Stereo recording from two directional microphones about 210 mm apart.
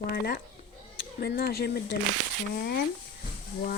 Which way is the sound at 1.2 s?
45° left (ahead or behind).